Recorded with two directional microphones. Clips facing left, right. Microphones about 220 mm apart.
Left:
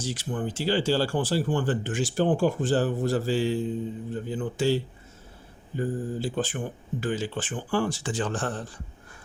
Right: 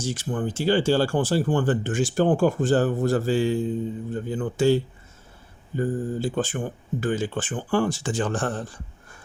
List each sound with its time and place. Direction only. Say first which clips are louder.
0.0 s speech: right 3 dB; 50° right (ahead or behind)